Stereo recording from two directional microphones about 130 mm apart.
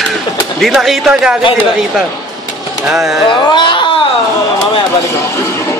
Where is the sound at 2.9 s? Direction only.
Centre (ahead or behind).